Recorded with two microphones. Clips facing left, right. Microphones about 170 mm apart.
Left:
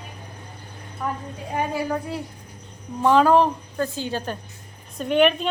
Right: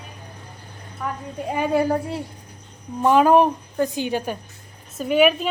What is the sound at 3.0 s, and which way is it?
Speech, 15° right (ahead or behind).